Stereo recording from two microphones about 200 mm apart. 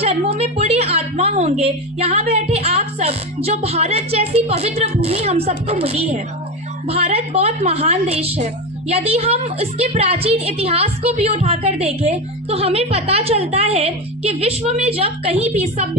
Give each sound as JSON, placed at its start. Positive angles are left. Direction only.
{"t": 0.0, "sound": "a woman's voice", "side_deg": -30}